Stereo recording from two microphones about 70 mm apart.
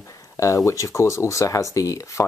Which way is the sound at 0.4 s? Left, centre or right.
Left.